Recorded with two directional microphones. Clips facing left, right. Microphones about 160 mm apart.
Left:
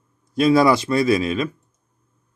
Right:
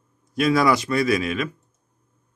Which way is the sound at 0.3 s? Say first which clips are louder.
Left 4 dB; 30° left (ahead or behind).